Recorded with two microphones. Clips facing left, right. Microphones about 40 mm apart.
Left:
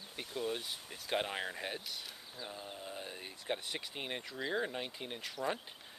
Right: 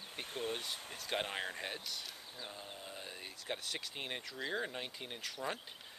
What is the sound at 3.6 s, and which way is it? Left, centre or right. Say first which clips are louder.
Speech: left 1 dB; centre.